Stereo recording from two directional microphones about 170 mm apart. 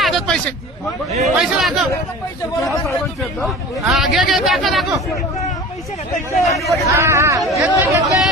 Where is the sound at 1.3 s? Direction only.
Centre (ahead or behind).